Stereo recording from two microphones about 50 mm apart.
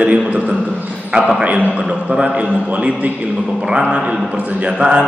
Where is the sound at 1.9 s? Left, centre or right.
Centre.